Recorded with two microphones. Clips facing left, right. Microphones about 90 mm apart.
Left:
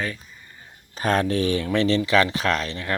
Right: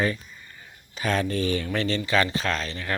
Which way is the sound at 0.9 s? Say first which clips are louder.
Left 4 dB; 45° left (ahead or behind).